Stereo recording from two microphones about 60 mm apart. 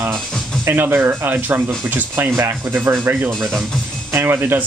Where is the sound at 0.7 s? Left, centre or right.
Right.